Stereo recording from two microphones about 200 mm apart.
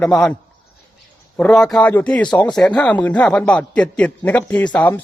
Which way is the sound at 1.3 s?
5° left (ahead or behind).